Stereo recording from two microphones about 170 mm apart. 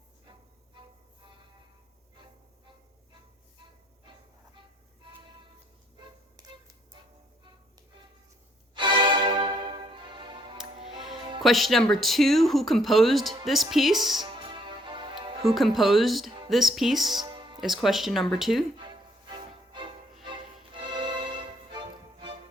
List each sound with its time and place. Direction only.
8.7 s music: 30° right (ahead or behind)
11.4 s speech: centre (ahead or behind)
14.3 s music: 30° right (ahead or behind)
15.4 s speech: centre (ahead or behind)
17.2 s music: 25° right (ahead or behind)
17.6 s speech: centre (ahead or behind)
18.8 s music: 30° right (ahead or behind)